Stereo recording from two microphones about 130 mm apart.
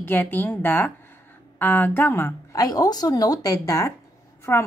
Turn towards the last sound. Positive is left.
turn(degrees=20)  # may be behind; listen again after turning